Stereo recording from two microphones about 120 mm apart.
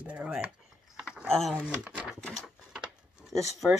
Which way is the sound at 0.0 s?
10° right (ahead or behind).